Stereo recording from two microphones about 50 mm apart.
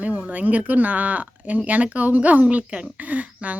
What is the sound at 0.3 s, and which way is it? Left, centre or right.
Speech, right.